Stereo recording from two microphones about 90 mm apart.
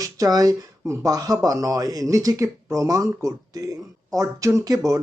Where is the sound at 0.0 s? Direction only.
40° right (ahead or behind).